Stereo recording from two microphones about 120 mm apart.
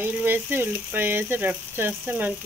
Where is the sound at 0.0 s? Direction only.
15° right (ahead or behind).